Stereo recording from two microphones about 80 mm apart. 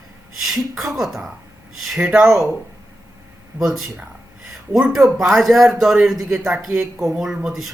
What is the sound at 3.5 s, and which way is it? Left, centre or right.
Speech, centre.